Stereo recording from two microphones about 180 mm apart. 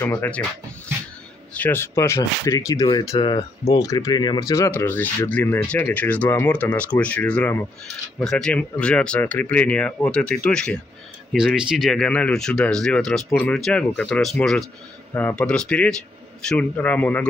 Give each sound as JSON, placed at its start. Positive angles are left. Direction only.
{"t": 0.0, "sound": "speech", "side_deg": 10}
{"t": 1.5, "sound": "speech", "side_deg": 10}